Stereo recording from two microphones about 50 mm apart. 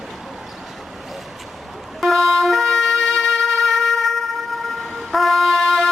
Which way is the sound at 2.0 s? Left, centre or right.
Centre.